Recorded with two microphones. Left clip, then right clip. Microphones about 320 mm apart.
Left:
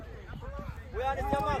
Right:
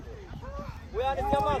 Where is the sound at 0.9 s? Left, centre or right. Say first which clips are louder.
Right 4 dB; right.